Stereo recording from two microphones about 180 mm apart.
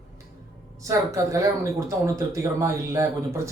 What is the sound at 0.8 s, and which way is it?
Speech, 15° right (ahead or behind).